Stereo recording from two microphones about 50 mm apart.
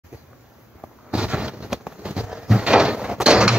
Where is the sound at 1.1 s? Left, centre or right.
Right.